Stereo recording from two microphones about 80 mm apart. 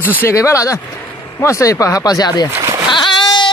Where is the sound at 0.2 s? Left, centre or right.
Left.